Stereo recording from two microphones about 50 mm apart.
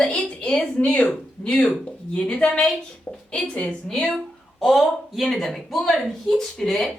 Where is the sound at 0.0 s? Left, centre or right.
Left.